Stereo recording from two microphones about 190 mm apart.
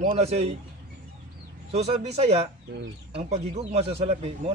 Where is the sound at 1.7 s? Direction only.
35° right (ahead or behind).